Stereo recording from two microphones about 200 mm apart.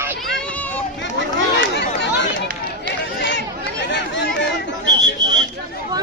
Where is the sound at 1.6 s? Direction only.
60° left (ahead or behind).